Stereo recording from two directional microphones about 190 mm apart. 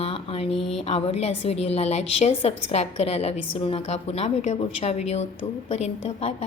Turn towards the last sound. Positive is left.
turn(degrees=30)  # may be behind; listen again after turning